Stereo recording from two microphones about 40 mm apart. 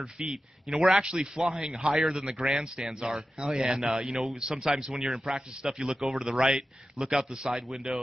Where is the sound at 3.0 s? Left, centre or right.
Centre.